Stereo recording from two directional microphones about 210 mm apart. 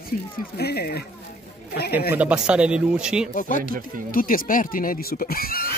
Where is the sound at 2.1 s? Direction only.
5° right (ahead or behind).